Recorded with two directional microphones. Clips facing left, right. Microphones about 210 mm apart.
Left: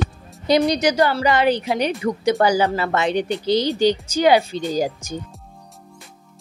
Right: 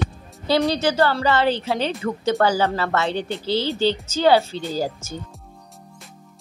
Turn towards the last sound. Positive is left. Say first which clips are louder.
# left 3 dB
turn(degrees=15)  # may be behind; listen again after turning